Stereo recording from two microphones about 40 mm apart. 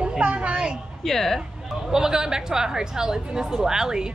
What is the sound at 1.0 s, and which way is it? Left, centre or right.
Speech, centre.